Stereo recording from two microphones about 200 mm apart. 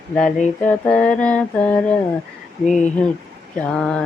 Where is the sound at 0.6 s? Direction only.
5° left (ahead or behind).